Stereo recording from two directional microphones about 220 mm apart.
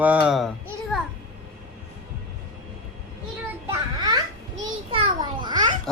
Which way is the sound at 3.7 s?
20° right (ahead or behind).